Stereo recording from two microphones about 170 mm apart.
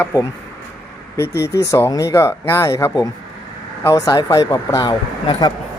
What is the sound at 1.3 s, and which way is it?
Speech, 75° left (ahead or behind).